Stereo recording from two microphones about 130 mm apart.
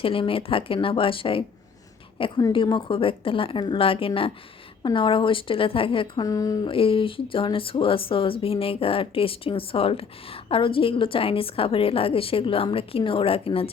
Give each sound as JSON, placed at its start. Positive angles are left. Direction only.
{"t": 0.0, "sound": "a woman's voice", "side_deg": 45}
{"t": 6.2, "sound": "speech", "side_deg": 25}
{"t": 6.7, "sound": "a woman's voice", "side_deg": 45}